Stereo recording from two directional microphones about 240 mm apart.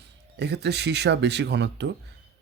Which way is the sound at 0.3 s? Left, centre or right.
Right.